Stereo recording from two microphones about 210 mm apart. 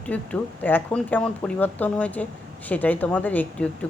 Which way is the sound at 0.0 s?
5° left (ahead or behind).